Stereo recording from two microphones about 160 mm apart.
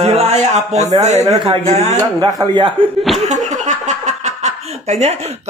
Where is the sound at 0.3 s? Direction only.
45° right (ahead or behind).